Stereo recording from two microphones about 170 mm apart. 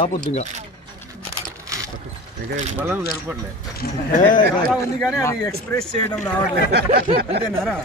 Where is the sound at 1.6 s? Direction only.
20° right (ahead or behind).